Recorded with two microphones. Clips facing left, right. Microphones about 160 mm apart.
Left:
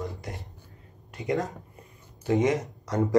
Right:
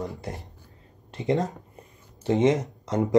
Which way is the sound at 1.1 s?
20° right (ahead or behind).